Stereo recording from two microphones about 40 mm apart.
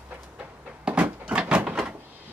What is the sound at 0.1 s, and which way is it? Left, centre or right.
Door, right.